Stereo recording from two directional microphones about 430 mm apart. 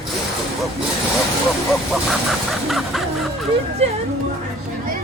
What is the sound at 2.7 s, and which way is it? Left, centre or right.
Music, centre.